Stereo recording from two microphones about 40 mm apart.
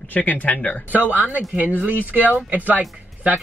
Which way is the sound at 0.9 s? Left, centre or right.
Right.